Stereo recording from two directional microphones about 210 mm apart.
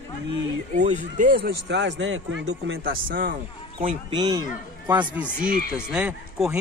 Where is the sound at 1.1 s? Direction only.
45° right (ahead or behind); by 2.8 s 65° right (ahead or behind).